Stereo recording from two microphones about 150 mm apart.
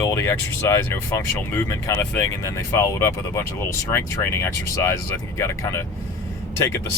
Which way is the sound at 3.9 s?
20° left (ahead or behind).